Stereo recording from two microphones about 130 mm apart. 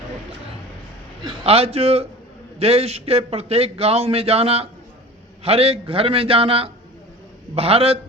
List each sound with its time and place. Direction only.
1.2 s a man's voice: 50° right (ahead or behind)